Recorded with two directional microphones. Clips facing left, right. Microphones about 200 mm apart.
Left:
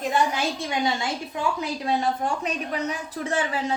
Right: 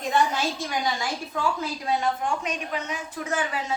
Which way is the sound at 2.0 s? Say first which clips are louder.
Left 1 dB; 35° left (ahead or behind).